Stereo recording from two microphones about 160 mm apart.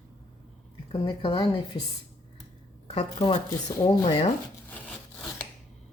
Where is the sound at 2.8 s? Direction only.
35° left (ahead or behind).